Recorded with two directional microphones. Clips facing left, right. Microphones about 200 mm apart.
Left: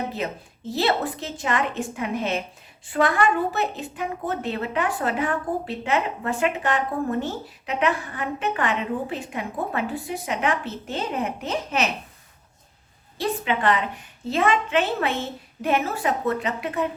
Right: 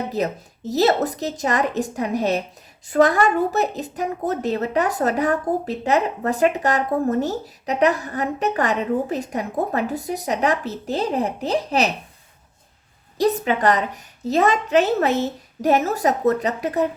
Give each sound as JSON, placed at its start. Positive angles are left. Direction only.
{"t": 0.1, "sound": "a woman's voice", "side_deg": -40}
{"t": 13.1, "sound": "a woman's voice", "side_deg": -40}